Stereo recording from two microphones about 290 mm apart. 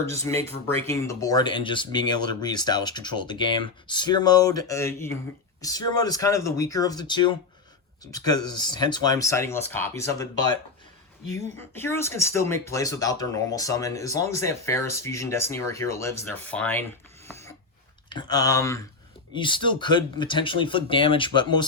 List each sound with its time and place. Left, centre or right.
0.2 s speech: right
0.8 s speech: centre
17.2 s filing: centre
18.1 s speech: centre